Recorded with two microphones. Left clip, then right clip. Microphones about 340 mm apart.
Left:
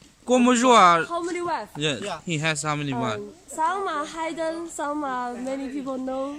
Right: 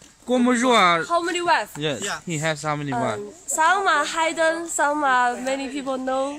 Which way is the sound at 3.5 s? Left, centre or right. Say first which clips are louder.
Right 7 dB; right.